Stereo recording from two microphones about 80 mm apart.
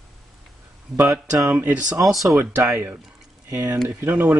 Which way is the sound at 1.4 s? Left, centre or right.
Centre.